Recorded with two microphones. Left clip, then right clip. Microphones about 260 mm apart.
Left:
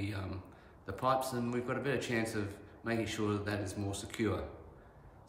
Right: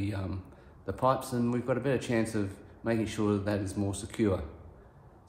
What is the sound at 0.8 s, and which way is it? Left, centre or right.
Speech, centre.